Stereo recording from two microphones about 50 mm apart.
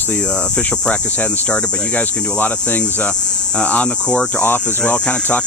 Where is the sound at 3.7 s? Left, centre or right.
Left.